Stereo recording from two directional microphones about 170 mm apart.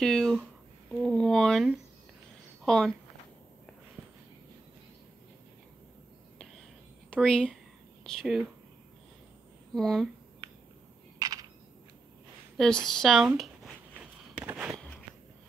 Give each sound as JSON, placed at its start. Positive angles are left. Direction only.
{"t": 0.0, "sound": "speech", "side_deg": 5}
{"t": 0.9, "sound": "a sound", "side_deg": 5}
{"t": 2.6, "sound": "speech", "side_deg": 5}
{"t": 7.1, "sound": "speech", "side_deg": 5}
{"t": 9.8, "sound": "speech", "side_deg": 5}
{"t": 11.1, "sound": "a sound", "side_deg": -20}
{"t": 12.8, "sound": "speech", "side_deg": 0}
{"t": 13.9, "sound": "walk", "side_deg": -10}